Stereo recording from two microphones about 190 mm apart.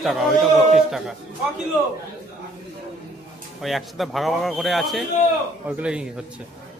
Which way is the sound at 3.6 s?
Centre (ahead or behind).